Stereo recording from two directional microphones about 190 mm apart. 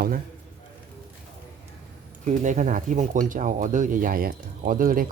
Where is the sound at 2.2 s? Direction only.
40° right (ahead or behind).